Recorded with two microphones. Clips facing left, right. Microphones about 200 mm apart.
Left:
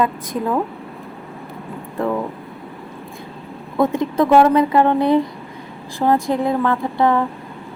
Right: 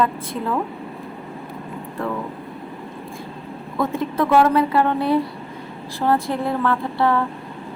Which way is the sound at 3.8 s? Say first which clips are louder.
Left 5 dB; 15° left (ahead or behind).